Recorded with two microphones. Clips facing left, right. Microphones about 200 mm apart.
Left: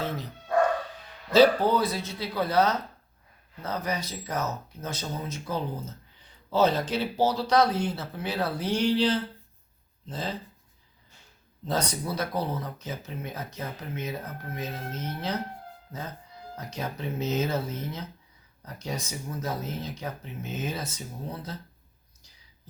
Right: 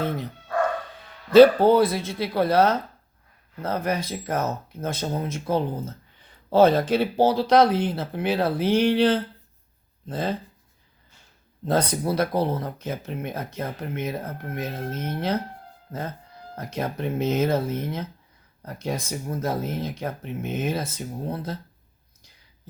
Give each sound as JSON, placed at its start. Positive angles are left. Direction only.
{"t": 1.3, "sound": "speech", "side_deg": -55}
{"t": 11.6, "sound": "speech", "side_deg": -55}
{"t": 16.6, "sound": "speech", "side_deg": -55}